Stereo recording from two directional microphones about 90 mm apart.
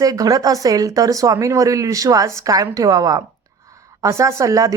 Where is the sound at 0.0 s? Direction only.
40° right (ahead or behind).